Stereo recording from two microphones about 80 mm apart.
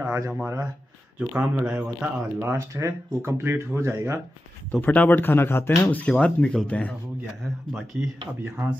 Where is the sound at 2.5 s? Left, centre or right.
Right.